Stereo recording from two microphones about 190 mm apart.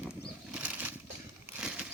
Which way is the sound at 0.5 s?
10° right (ahead or behind).